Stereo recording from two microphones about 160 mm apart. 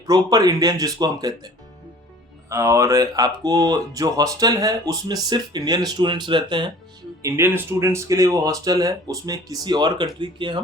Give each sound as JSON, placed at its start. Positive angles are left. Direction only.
{"t": 0.1, "sound": "speech", "side_deg": -25}
{"t": 2.5, "sound": "speech", "side_deg": -20}
{"t": 7.2, "sound": "speech", "side_deg": -15}